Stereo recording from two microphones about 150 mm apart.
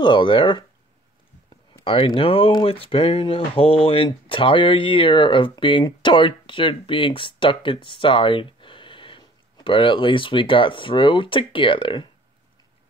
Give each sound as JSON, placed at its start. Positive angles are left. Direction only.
{"t": 0.0, "sound": "speech", "side_deg": 35}
{"t": 1.9, "sound": "speech", "side_deg": 35}